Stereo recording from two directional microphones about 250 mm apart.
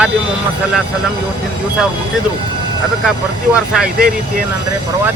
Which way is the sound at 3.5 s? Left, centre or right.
Centre.